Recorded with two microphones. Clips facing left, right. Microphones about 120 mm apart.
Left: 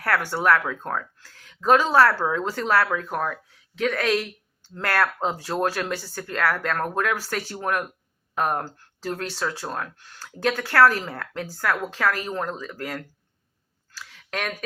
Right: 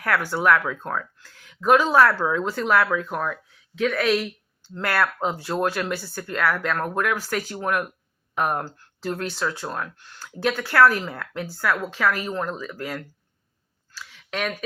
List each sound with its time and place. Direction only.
0.0 s speech: 40° left (ahead or behind)
14.3 s speech: 45° left (ahead or behind)